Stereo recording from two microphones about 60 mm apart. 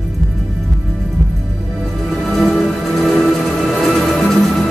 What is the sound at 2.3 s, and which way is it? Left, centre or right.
Music, centre.